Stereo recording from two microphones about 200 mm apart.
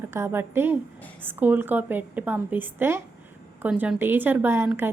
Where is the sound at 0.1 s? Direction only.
10° right (ahead or behind).